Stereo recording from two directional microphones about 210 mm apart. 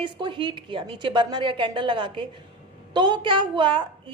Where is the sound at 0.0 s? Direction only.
20° right (ahead or behind).